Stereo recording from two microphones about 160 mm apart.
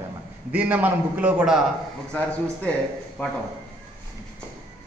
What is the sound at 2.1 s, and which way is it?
A man's voice, 5° left (ahead or behind).